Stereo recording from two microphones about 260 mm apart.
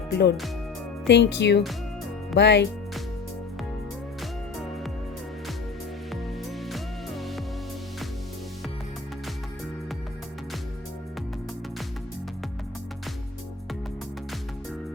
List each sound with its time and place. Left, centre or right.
0.1 s speech: left
6.7 s music: centre